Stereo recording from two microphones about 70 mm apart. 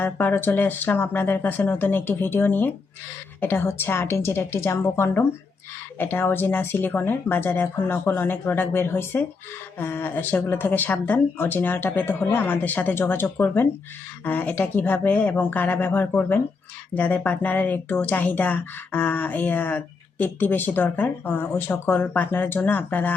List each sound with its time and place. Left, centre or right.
0.0 s speech: left